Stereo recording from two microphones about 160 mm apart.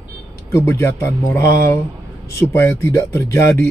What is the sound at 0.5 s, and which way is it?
Speech, 15° left (ahead or behind).